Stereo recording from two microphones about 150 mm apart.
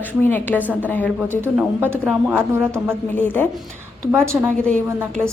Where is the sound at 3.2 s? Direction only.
15° left (ahead or behind).